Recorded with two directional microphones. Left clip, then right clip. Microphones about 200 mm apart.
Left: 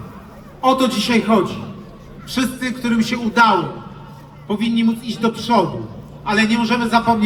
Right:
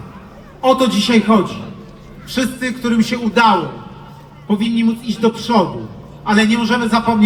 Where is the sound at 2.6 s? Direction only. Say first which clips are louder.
Right 2 dB; 25° right (ahead or behind).